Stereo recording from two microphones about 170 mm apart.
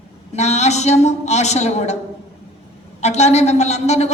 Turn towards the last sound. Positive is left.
turn(degrees=40)  # may be behind; listen again after turning